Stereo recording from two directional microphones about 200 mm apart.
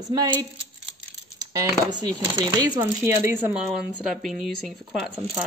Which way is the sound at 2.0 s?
20° right (ahead or behind).